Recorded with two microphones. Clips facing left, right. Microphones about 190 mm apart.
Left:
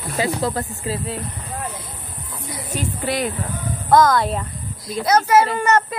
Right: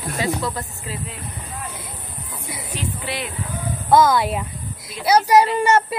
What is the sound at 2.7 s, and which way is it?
Speech, 45° left (ahead or behind).